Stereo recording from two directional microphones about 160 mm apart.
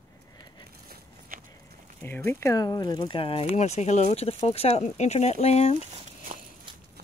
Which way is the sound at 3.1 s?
35° left (ahead or behind).